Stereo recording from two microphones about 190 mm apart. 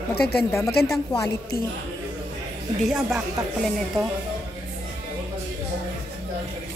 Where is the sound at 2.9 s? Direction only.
Centre (ahead or behind).